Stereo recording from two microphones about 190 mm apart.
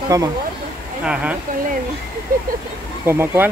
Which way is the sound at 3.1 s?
10° right (ahead or behind).